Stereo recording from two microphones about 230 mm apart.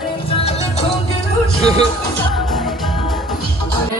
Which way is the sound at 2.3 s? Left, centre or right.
Centre.